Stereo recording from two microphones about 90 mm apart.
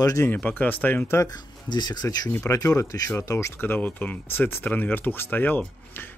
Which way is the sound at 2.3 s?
25° left (ahead or behind).